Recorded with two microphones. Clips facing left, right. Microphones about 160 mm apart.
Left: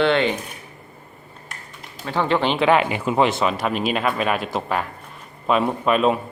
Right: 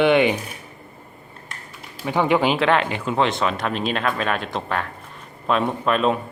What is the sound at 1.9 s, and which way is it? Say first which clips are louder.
Speech: right 2 dB; 15° right (ahead or behind).